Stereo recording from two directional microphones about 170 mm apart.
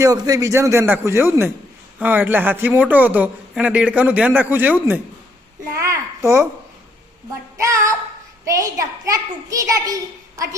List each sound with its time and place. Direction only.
0.0 s speech: 20° right (ahead or behind)
7.6 s a child's voice: 20° right (ahead or behind)